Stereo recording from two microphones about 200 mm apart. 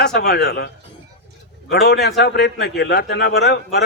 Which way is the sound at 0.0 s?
50° left (ahead or behind).